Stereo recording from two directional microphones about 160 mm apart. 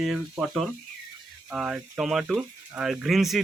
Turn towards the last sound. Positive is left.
turn(degrees=0)  # may be behind; listen again after turning